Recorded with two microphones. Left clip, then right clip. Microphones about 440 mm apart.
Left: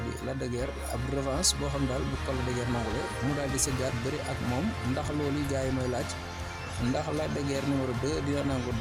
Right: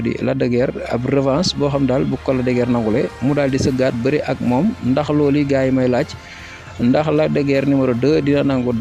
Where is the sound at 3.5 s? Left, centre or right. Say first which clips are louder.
Right 14 dB; left.